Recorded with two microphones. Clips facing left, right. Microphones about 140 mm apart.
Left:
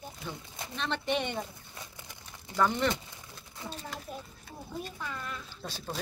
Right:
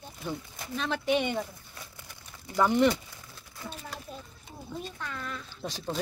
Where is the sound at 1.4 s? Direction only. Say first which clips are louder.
Right 2 dB; 20° left (ahead or behind).